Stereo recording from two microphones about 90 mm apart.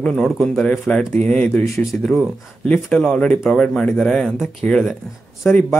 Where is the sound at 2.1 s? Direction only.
Centre (ahead or behind); by 5.6 s 20° left (ahead or behind).